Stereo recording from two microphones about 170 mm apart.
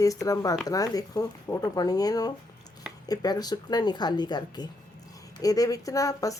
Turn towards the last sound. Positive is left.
turn(degrees=20)  # may be behind; listen again after turning